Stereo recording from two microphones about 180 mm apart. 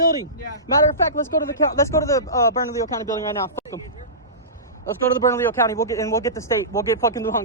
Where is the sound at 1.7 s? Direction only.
15° left (ahead or behind).